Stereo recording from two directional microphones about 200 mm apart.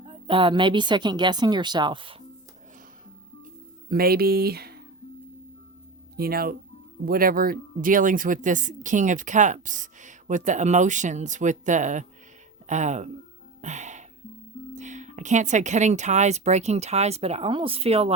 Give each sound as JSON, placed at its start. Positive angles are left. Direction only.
{"t": 0.0, "sound": "speech", "side_deg": -25}
{"t": 3.8, "sound": "speech", "side_deg": -50}
{"t": 6.1, "sound": "speech", "side_deg": -50}
{"t": 13.6, "sound": "music", "side_deg": -35}
{"t": 14.8, "sound": "speech", "side_deg": -35}